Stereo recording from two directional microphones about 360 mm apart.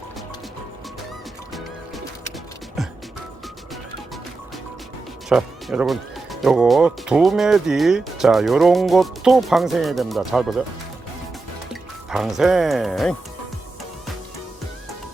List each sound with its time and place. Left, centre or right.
5.3 s speech: centre
11.7 s speech: centre